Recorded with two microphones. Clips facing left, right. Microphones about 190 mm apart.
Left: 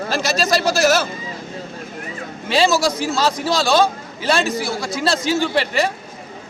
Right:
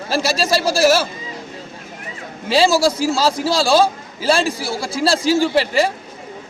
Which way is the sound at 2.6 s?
30° right (ahead or behind).